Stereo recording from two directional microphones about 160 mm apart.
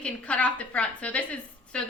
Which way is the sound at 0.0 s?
10° left (ahead or behind).